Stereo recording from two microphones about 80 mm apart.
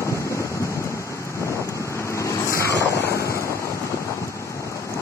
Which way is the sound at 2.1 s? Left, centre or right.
Left.